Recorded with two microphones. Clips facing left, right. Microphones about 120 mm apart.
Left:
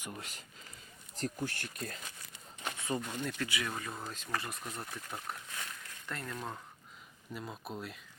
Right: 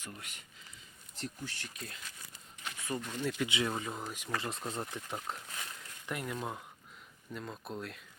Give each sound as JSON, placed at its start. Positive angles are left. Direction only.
{"t": 0.0, "sound": "speech", "side_deg": 25}
{"t": 1.1, "sound": "speech", "side_deg": 45}
{"t": 2.7, "sound": "a sound", "side_deg": 25}
{"t": 3.0, "sound": "speech", "side_deg": 10}
{"t": 3.2, "sound": "speech", "side_deg": -10}
{"t": 3.5, "sound": "speech", "side_deg": -25}
{"t": 4.4, "sound": "speech", "side_deg": -25}
{"t": 7.3, "sound": "speech", "side_deg": 5}